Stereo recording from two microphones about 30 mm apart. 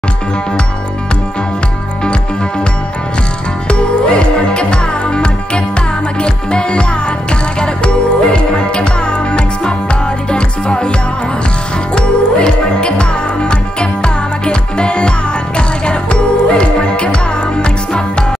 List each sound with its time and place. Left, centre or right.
3.6 s music: left
11.9 s music: left